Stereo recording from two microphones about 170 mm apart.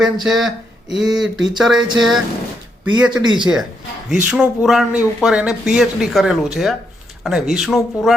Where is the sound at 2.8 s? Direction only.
25° right (ahead or behind).